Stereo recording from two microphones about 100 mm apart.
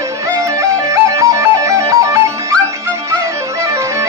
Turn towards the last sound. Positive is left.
turn(degrees=-30)  # may be behind; listen again after turning